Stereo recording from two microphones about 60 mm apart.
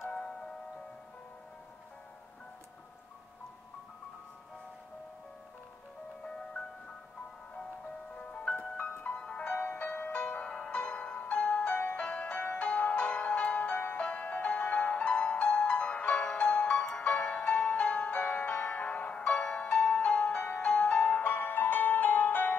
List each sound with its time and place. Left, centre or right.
8.2 s music: centre
21.2 s music: left